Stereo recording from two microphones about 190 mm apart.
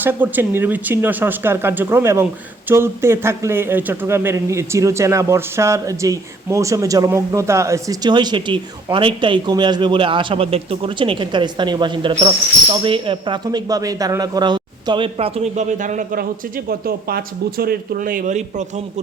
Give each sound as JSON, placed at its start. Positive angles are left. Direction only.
{"t": 0.0, "sound": "speech", "side_deg": -10}